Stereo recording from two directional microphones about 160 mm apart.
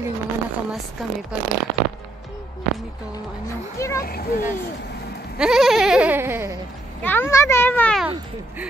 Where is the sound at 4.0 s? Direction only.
70° left (ahead or behind).